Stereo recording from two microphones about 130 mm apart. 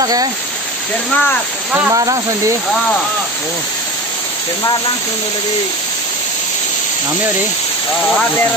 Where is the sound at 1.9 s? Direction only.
25° right (ahead or behind).